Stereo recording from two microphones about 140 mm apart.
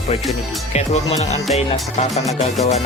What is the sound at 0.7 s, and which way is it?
Music, 50° left (ahead or behind).